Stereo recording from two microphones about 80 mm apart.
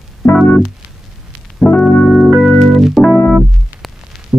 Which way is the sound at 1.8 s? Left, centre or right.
Centre.